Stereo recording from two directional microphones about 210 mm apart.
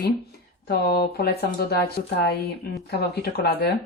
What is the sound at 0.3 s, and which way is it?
Speech, 50° left (ahead or behind).